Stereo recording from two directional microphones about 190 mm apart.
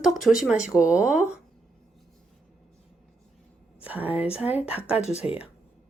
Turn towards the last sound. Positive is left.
turn(degrees=35)  # may be behind; listen again after turning